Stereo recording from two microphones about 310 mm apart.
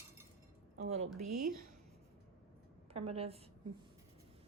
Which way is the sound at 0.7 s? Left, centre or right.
Right.